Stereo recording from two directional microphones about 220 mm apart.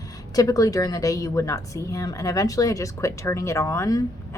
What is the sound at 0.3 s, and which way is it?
A woman's voice, 15° left (ahead or behind).